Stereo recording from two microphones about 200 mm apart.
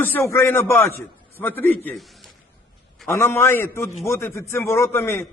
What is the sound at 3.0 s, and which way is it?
A man's voice, 10° left (ahead or behind).